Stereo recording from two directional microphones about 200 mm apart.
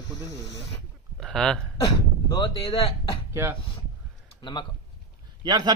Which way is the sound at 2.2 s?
25° left (ahead or behind).